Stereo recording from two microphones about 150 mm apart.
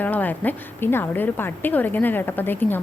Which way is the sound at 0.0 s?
10° left (ahead or behind).